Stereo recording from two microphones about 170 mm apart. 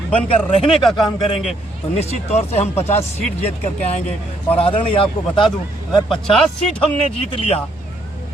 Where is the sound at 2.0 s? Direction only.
40° left (ahead or behind).